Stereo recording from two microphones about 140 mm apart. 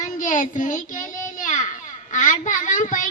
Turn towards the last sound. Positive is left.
turn(degrees=70)  # may be behind; listen again after turning